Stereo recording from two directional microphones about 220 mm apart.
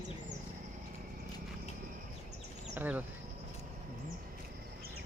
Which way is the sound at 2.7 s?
10° right (ahead or behind).